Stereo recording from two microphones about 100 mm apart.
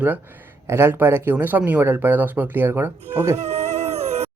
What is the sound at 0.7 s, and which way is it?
Speech, 25° right (ahead or behind).